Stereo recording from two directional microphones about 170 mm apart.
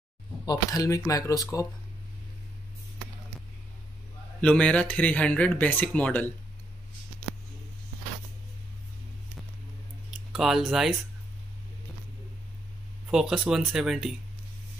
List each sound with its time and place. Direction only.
0.5 s speech: 20° left (ahead or behind)
4.4 s speech: 5° left (ahead or behind)
10.3 s speech: centre (ahead or behind)
13.1 s speech: centre (ahead or behind)